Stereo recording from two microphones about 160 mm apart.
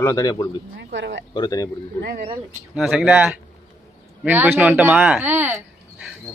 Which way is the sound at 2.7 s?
Centre (ahead or behind).